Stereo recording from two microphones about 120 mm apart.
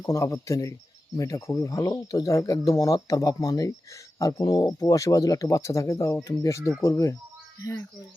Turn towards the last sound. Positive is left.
turn(degrees=25)  # may be behind; listen again after turning